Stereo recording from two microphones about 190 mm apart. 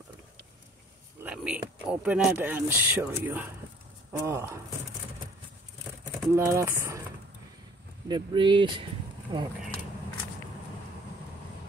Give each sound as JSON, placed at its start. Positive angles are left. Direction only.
{"t": 1.2, "sound": "speech", "side_deg": -5}
{"t": 6.3, "sound": "speech", "side_deg": -15}
{"t": 8.1, "sound": "speech", "side_deg": -25}